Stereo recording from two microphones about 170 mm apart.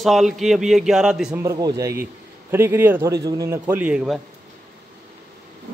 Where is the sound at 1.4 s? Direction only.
20° right (ahead or behind); by 4.2 s 5° right (ahead or behind).